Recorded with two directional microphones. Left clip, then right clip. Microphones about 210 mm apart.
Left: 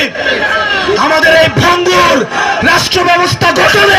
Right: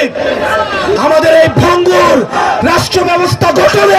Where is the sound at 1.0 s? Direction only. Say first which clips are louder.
Right 1 dB; 50° right (ahead or behind).